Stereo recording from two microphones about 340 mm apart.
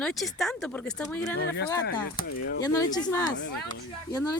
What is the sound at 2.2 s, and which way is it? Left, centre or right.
Speech, left.